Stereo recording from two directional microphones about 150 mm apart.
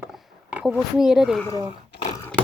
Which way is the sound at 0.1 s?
10° right (ahead or behind).